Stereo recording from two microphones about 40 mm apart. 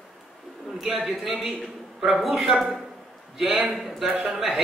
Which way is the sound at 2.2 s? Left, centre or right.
Centre.